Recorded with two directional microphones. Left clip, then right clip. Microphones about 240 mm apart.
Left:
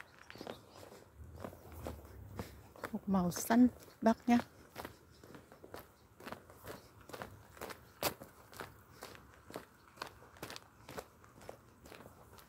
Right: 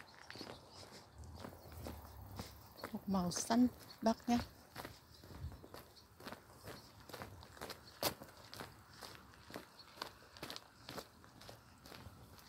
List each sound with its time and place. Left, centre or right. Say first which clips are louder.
1.4 s walk: left 5 dB; centre
2.3 s a sound: left 4 dB; centre
5.7 s walk: left 4 dB; centre
8.5 s walk: left 3 dB; centre
9.1 s walk: left 2 dB; centre